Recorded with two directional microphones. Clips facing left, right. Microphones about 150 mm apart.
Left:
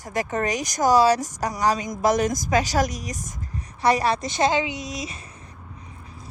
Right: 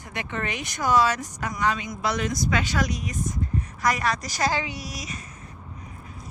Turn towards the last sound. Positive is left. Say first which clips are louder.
# left 4 dB
turn(degrees=25)  # may be behind; listen again after turning